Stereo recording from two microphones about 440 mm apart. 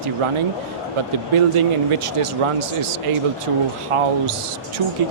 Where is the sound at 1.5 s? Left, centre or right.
Right.